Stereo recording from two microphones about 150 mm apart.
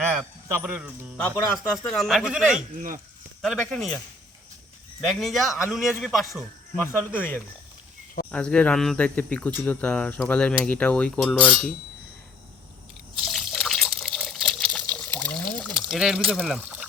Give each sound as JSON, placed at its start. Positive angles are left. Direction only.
{"t": 0.0, "sound": "a sound", "side_deg": 0}
{"t": 0.4, "sound": "speech", "side_deg": -15}
{"t": 1.8, "sound": "speech", "side_deg": 0}
{"t": 2.7, "sound": "speech", "side_deg": -65}
{"t": 3.4, "sound": "speech", "side_deg": 5}
{"t": 6.8, "sound": "speech", "side_deg": 15}
{"t": 13.1, "sound": "water", "side_deg": 0}